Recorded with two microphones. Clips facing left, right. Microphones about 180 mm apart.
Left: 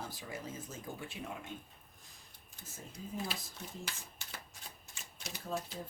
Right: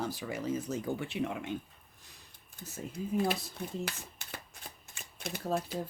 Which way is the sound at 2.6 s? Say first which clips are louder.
Right 9 dB; 65° right (ahead or behind).